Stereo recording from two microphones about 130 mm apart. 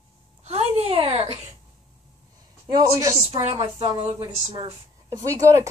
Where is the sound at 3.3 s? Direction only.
55° right (ahead or behind).